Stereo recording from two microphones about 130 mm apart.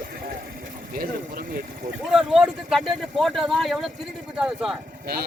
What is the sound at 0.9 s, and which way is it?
Speech, 90° right.